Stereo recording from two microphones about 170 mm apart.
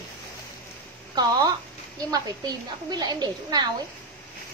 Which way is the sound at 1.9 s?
20° right (ahead or behind).